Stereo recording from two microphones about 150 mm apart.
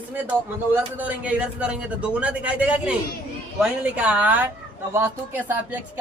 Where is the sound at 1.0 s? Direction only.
10° right (ahead or behind).